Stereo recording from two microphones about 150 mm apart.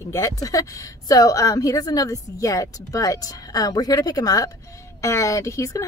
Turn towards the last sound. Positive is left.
turn(degrees=20)  # may be behind; listen again after turning